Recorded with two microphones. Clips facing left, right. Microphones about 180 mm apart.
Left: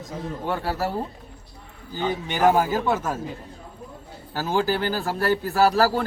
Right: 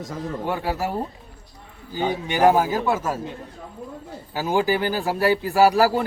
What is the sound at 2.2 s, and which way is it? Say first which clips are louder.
Speech: right 2 dB; 10° right (ahead or behind).